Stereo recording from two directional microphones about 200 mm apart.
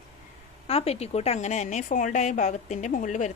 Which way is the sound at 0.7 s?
30° left (ahead or behind).